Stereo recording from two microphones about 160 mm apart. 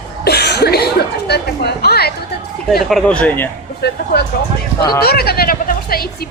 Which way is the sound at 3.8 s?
90° left.